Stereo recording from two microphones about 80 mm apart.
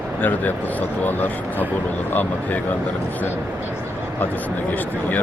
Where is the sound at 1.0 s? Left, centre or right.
Left.